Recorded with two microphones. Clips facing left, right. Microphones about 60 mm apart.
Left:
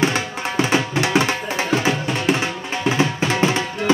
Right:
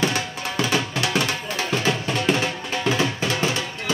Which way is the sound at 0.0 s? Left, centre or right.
Left.